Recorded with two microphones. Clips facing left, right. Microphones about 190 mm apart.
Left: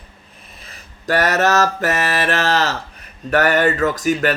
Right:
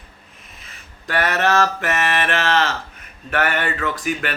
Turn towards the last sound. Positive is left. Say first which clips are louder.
# left 7 dB
turn(degrees=40)  # may be behind; listen again after turning